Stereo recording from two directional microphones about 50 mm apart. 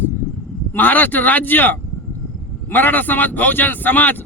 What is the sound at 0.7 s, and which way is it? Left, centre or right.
Speech, left.